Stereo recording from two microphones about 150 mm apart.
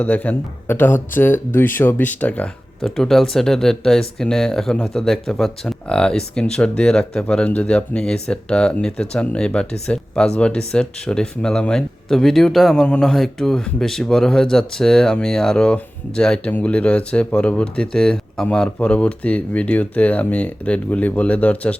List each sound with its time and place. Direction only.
0.0 s speech: 10° left (ahead or behind)